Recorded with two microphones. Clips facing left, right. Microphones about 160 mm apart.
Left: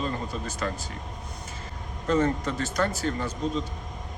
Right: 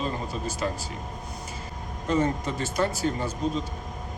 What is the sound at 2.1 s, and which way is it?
Speech, 10° right (ahead or behind).